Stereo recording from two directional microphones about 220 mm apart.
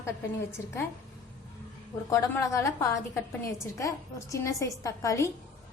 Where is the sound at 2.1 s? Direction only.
15° left (ahead or behind).